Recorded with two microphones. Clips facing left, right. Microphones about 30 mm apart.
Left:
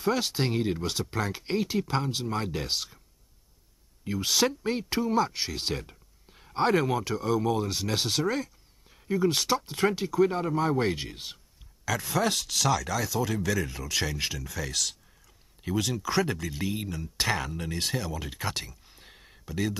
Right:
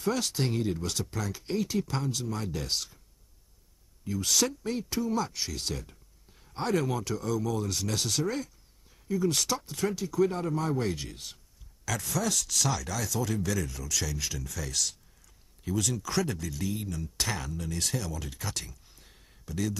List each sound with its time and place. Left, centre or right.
0.0 s speech: left
4.0 s speech: left
8.9 s a sound: left
9.3 s speech: left
9.8 s speech: left
10.1 s speech: left
12.1 s speech: left
12.5 s speech: centre
13.7 s speech: left
14.4 s speech: left
18.9 s a sound: left